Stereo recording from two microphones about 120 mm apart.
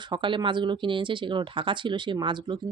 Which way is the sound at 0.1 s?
40° right (ahead or behind).